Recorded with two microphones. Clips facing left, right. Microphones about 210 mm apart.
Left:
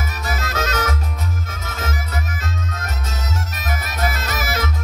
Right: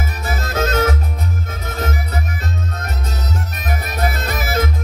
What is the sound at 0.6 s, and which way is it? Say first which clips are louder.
Music: right 7 dB; 35° right (ahead or behind).